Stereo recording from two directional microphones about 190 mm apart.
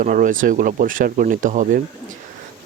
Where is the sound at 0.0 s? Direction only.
45° right (ahead or behind).